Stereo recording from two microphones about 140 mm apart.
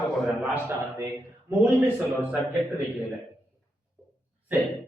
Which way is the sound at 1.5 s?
15° right (ahead or behind).